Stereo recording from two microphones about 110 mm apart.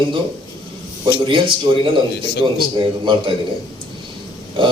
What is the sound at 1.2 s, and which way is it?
Speech, 50° right (ahead or behind).